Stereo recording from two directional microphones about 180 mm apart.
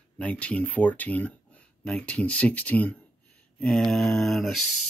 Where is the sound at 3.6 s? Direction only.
5° left (ahead or behind).